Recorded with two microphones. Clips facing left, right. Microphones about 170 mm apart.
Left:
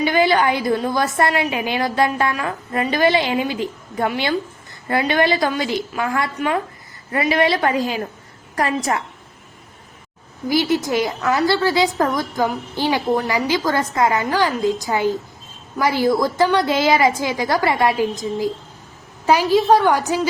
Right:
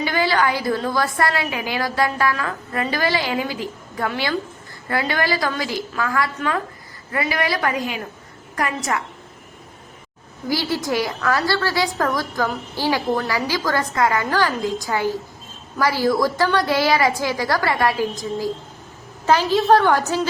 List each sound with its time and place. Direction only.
0.0 s a woman's voice: 20° left (ahead or behind)
10.5 s a woman's voice: 20° left (ahead or behind)